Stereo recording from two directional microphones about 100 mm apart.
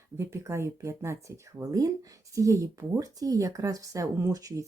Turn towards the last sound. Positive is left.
turn(degrees=-35)  # may be behind; listen again after turning